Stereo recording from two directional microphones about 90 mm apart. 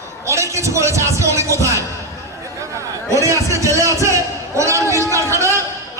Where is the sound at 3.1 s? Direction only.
35° right (ahead or behind).